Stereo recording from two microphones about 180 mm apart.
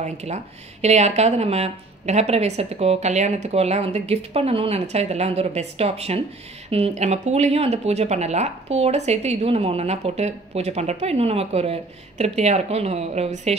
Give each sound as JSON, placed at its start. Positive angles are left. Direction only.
{"t": 0.0, "sound": "speech", "side_deg": -35}